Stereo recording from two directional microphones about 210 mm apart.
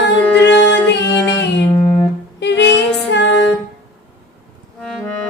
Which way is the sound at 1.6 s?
15° left (ahead or behind).